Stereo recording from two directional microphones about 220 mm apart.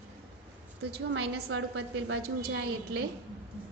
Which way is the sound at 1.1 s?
55° right (ahead or behind).